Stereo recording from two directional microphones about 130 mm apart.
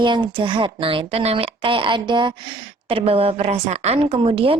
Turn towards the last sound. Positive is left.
turn(degrees=-45)  # may be behind; listen again after turning